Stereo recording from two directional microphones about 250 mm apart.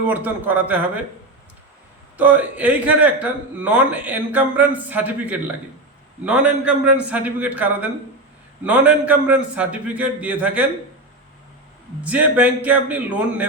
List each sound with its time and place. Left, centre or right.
0.0 s speech: centre
2.1 s a man's voice: centre
12.0 s a man's voice: centre